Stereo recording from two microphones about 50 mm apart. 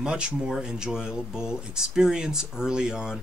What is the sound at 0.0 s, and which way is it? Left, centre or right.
Speech, centre.